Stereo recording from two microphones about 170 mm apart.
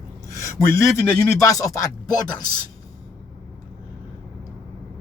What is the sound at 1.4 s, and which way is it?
A man's voice, 20° left (ahead or behind).